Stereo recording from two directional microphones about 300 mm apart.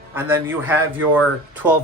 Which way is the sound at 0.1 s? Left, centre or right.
Centre.